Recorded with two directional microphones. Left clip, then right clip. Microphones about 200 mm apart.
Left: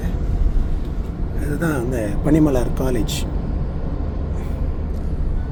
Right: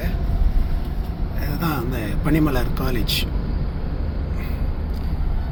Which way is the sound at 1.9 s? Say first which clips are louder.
Left 4 dB; 15° left (ahead or behind).